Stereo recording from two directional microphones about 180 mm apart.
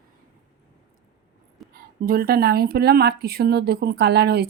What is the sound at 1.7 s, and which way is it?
Speech, 55° right (ahead or behind).